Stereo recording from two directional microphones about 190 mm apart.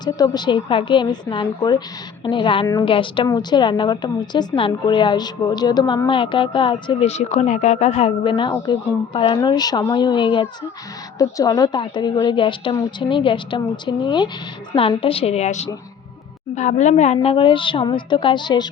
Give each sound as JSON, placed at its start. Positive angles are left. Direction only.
{"t": 0.0, "sound": "a woman's voice", "side_deg": 20}